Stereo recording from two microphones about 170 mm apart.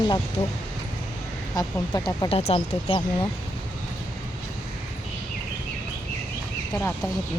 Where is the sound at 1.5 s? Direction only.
25° left (ahead or behind).